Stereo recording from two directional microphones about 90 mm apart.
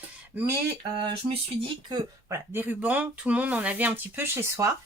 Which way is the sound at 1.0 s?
70° right (ahead or behind).